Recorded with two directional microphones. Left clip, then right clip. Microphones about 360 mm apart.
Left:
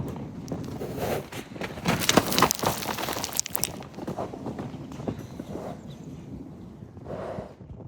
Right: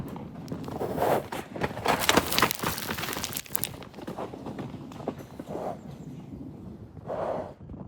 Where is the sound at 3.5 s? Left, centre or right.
Centre.